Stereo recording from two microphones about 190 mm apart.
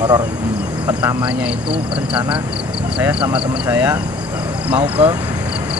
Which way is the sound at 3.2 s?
25° right (ahead or behind).